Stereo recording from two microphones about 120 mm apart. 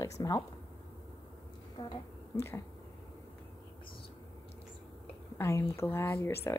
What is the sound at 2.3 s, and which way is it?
Speech, 20° left (ahead or behind).